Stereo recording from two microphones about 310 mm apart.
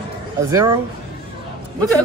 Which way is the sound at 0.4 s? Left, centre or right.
Centre.